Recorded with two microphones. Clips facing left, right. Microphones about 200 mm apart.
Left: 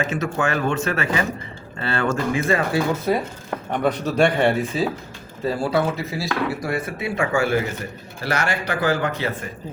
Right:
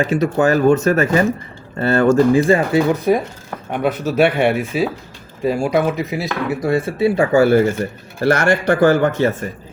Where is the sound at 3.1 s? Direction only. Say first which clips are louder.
Right 5 dB; 15° right (ahead or behind).